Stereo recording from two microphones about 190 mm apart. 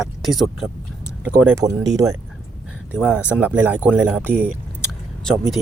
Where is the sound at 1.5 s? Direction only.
20° right (ahead or behind).